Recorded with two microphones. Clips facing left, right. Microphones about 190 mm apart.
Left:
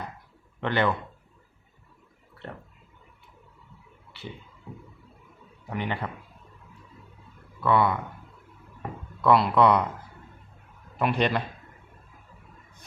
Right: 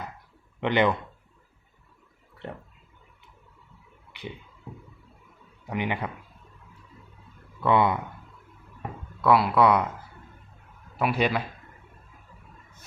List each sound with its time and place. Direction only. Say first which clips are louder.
0.6 s a man's voice: right 2 dB; 15° right (ahead or behind)
5.7 s a man's voice: right 2 dB; 15° right (ahead or behind)
7.6 s speech: right 1 dB; 20° right (ahead or behind)
9.2 s speech: even; 5° right (ahead or behind)
10.9 s speech: even; 5° right (ahead or behind)